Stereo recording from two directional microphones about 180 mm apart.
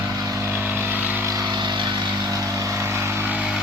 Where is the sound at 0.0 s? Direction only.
20° right (ahead or behind).